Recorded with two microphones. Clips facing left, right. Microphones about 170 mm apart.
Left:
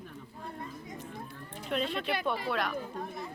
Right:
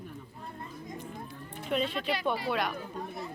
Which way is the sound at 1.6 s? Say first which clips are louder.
Right 2 dB; centre (ahead or behind).